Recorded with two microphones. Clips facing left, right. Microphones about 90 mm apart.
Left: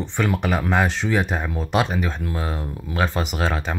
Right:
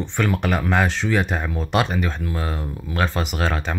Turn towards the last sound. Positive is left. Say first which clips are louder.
# even
turn(degrees=10)  # may be behind; listen again after turning